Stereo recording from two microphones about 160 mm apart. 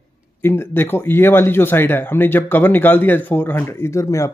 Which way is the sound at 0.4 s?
15° left (ahead or behind).